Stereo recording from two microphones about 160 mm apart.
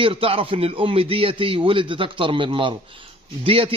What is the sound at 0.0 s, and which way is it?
A man's voice, 35° right (ahead or behind).